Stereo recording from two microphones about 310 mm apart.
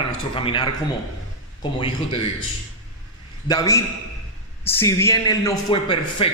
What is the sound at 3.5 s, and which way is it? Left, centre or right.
Speech, centre.